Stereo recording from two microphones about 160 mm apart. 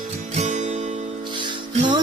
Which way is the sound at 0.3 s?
45° right (ahead or behind).